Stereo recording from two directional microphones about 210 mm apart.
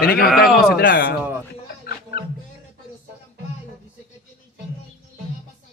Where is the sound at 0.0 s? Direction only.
45° left (ahead or behind).